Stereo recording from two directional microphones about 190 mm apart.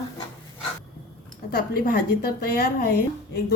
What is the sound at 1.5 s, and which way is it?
A woman's voice, 55° left (ahead or behind).